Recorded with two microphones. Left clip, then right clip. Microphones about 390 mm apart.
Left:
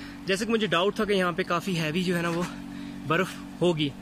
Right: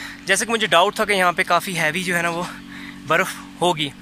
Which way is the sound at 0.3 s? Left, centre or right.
Centre.